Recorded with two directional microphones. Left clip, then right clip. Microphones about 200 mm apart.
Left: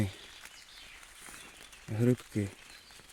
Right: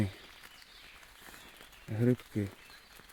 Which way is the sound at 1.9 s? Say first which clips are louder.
Left 1 dB; 20° left (ahead or behind).